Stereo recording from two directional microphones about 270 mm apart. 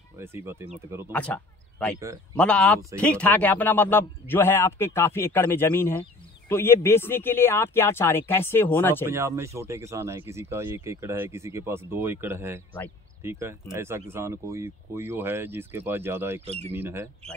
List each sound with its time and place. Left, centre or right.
0.2 s speech: centre
1.1 s a man's voice: centre
9.0 s speech: centre
16.4 s speech: right
16.7 s speech: centre